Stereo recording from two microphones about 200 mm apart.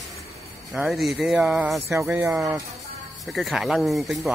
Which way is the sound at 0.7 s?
Centre (ahead or behind).